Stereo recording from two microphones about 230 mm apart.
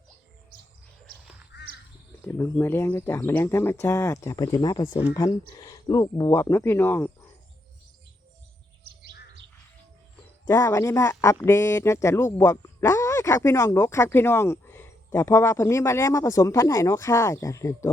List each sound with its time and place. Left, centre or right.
1.5 s crow: left
2.2 s speech: centre
10.4 s speech: centre